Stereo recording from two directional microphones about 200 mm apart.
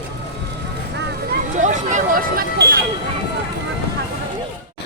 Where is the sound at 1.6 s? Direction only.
40° right (ahead or behind).